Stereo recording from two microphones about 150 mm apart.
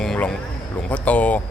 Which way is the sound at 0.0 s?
5° left (ahead or behind).